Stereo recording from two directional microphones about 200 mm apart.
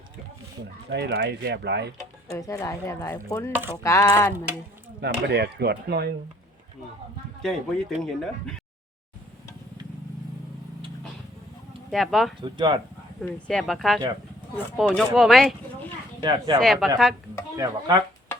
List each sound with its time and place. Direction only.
0.9 s speech: 55° right (ahead or behind)
2.3 s speech: 15° left (ahead or behind)
3.5 s speech: 10° right (ahead or behind)
3.8 s speech: 15° left (ahead or behind)
4.9 s speech: 55° right (ahead or behind)
7.4 s speech: centre (ahead or behind)
11.9 s speech: centre (ahead or behind)
12.4 s speech: 25° right (ahead or behind)
13.2 s speech: centre (ahead or behind)
17.6 s speech: 20° right (ahead or behind)